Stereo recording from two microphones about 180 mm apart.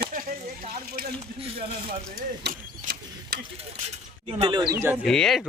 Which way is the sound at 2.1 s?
50° right (ahead or behind).